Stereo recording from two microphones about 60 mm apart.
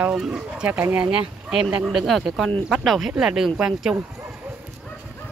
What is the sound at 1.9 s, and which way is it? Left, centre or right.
Speech, centre.